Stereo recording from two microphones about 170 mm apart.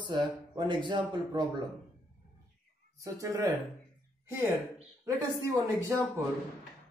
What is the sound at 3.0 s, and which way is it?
A man's voice, 20° right (ahead or behind).